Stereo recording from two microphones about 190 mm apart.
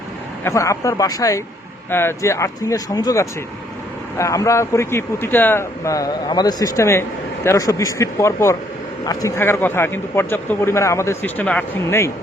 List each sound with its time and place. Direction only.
0.4 s a man's voice: 15° left (ahead or behind)